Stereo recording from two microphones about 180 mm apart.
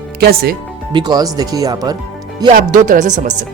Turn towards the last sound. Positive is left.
turn(degrees=-45)  # may be behind; listen again after turning